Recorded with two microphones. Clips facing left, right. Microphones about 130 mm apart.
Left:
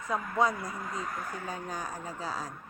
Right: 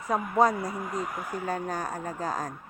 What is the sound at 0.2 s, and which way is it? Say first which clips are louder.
Speech: right 5 dB; 15° right (ahead or behind).